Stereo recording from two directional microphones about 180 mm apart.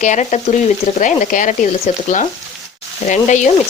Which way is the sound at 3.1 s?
40° left (ahead or behind).